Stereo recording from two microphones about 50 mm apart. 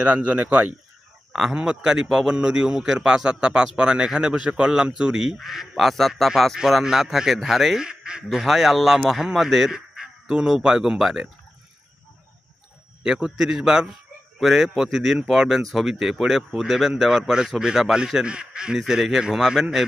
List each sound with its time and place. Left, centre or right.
0.0 s speech: right
1.3 s speech: centre
1.5 s a man's voice: centre
7.9 s quack: centre
8.3 s a man's voice: centre
13.0 s a man's voice: centre